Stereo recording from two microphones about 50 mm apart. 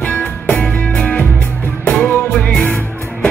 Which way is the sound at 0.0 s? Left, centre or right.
Left.